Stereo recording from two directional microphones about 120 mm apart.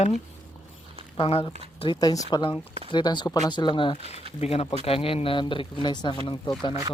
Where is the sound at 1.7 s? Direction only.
45° left (ahead or behind).